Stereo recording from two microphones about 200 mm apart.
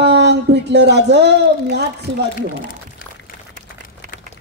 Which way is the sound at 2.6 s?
45° left (ahead or behind).